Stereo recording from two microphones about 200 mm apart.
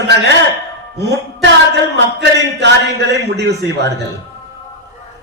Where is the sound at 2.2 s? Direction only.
60° right (ahead or behind).